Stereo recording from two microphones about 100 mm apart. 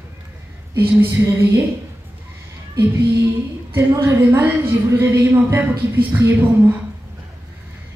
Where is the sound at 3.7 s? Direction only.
25° right (ahead or behind).